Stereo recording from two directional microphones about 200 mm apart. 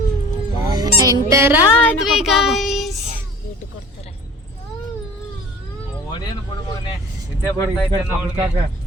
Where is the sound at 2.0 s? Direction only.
Centre (ahead or behind).